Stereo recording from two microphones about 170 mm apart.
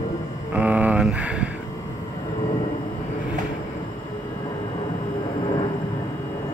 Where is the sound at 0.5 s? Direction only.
10° right (ahead or behind).